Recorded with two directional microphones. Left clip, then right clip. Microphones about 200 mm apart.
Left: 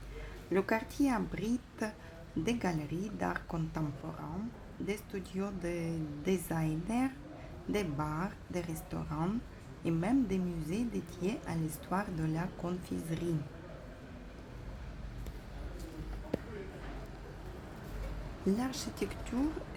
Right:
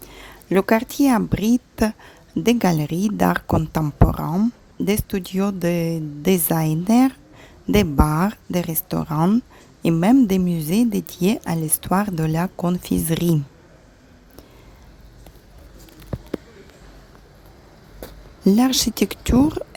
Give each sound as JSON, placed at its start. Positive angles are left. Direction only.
{"t": 0.5, "sound": "a woman's voice", "side_deg": -40}
{"t": 18.4, "sound": "a woman's voice", "side_deg": -45}